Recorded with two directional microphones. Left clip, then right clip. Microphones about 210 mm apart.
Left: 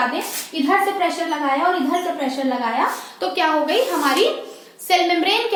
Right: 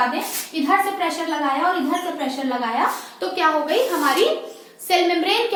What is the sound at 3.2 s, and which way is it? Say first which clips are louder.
Speech: left 1 dB; 15° left (ahead or behind).